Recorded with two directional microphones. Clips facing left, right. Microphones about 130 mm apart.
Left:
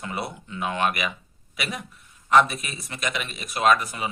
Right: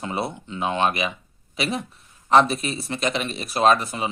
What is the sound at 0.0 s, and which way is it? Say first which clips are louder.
Speech: right 4 dB; 25° right (ahead or behind).